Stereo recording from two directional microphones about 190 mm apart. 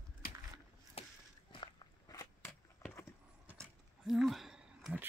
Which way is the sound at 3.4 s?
5° right (ahead or behind).